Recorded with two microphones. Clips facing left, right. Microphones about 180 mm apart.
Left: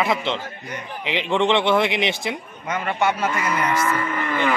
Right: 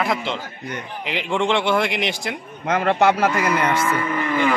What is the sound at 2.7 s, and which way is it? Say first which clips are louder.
Speech: right 5 dB; 70° right (ahead or behind).